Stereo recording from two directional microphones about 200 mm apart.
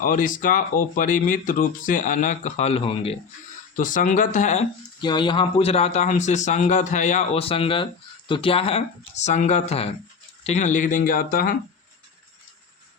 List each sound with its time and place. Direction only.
0.0 s speech: 40° left (ahead or behind)
3.8 s speech: 40° left (ahead or behind)
4.9 s speech: 20° left (ahead or behind); by 11.5 s 45° left (ahead or behind)